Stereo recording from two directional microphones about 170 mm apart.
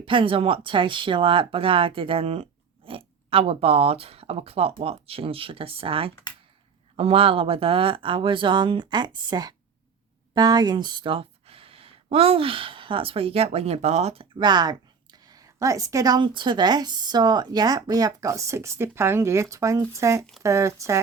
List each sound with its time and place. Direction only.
0.0 s speech: 30° right (ahead or behind)